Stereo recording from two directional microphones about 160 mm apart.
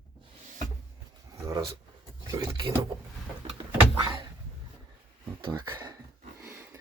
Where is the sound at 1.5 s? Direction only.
30° right (ahead or behind).